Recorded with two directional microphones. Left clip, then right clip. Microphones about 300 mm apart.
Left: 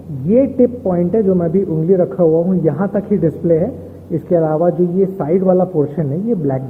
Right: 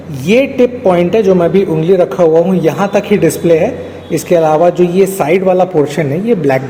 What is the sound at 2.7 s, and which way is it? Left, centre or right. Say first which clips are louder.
Speech: right 6 dB; right.